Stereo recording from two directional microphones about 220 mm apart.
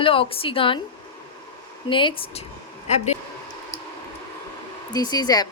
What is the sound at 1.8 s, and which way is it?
Speech, 20° left (ahead or behind).